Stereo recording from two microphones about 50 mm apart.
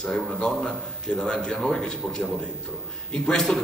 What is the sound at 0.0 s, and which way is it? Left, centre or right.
A man's voice, centre.